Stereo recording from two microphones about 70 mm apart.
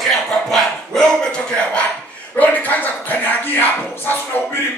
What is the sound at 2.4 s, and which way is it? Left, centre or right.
Speech, left.